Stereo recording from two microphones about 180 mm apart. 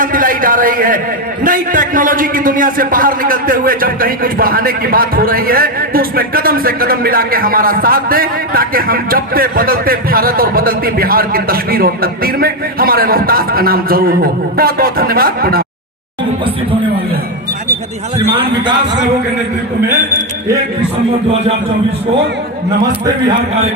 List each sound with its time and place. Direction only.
0.0 s a man's voice: 50° right (ahead or behind)
18.3 s a man's voice: 30° right (ahead or behind)